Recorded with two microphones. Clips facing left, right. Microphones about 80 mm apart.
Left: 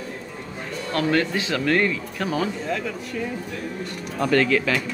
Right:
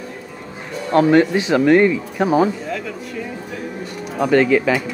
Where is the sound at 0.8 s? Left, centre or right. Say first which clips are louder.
Right 9 dB; centre.